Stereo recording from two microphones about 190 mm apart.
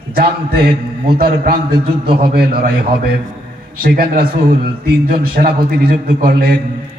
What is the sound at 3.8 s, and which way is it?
A man's voice, 50° right (ahead or behind).